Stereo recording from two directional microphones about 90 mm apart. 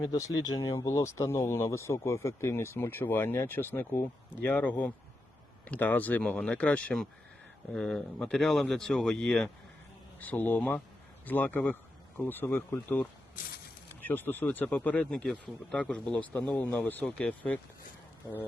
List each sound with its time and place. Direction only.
0.0 s speech: 45° left (ahead or behind); by 9.5 s 10° left (ahead or behind)
10.2 s speech: 20° left (ahead or behind)